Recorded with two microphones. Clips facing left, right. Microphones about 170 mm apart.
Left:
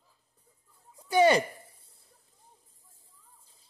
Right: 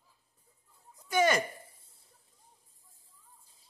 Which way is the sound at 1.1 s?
30° left (ahead or behind).